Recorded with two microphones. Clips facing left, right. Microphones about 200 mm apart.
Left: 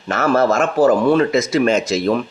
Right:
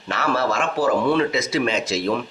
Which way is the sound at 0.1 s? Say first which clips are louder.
Left 7 dB; 45° left (ahead or behind).